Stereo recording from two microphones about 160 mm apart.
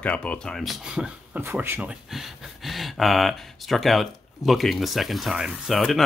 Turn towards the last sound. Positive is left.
turn(degrees=0)  # may be behind; listen again after turning